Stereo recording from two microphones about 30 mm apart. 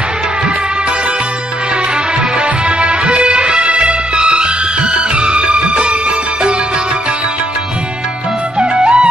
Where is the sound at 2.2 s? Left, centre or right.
Right.